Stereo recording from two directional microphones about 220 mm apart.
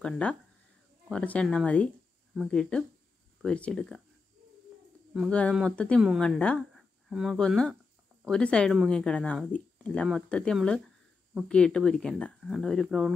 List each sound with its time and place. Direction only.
0.0 s speech: 5° left (ahead or behind)
5.1 s speech: centre (ahead or behind)